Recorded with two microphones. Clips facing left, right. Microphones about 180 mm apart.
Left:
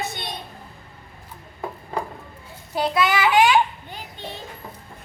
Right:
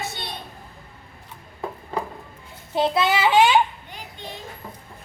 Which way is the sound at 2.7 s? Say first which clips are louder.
Right 1 dB; 25° right (ahead or behind).